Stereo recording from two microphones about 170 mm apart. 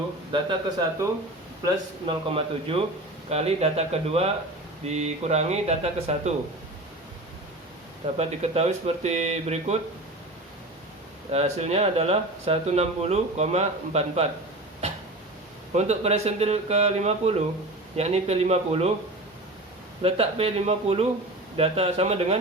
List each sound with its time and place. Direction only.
0.8 s speech: 15° right (ahead or behind)
1.6 s speech: 30° right (ahead or behind)
8.2 s speech: 40° right (ahead or behind)
11.3 s speech: 40° right (ahead or behind)
15.7 s speech: 40° right (ahead or behind)
20.0 s speech: 35° right (ahead or behind)